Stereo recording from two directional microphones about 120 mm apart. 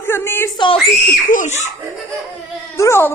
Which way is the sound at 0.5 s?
45° left (ahead or behind).